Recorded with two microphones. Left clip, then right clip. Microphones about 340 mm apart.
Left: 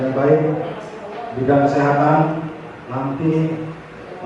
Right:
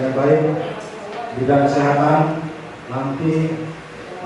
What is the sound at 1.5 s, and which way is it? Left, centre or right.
Speech, centre.